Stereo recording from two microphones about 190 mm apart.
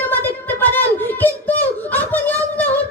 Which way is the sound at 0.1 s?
10° left (ahead or behind).